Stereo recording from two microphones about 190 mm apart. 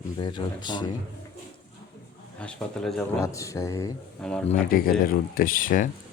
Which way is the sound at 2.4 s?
5° left (ahead or behind).